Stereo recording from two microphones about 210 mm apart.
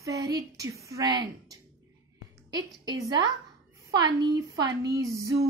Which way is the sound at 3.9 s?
20° right (ahead or behind).